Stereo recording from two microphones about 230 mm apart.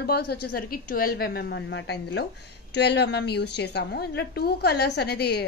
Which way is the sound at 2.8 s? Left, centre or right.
Left.